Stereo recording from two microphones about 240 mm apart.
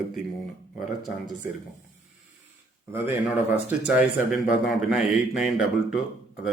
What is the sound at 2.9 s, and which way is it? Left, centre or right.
A man's voice, centre.